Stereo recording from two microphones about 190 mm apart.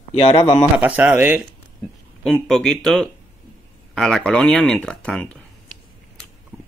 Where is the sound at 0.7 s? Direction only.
10° right (ahead or behind).